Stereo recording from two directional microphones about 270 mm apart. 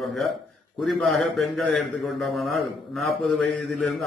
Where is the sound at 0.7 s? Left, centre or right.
Centre.